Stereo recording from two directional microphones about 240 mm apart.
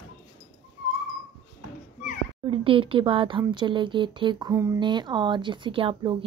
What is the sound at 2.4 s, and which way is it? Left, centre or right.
Speech, right.